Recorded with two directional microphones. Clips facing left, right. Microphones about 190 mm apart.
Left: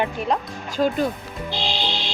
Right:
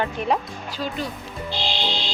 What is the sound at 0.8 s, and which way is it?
Speech, 50° left (ahead or behind).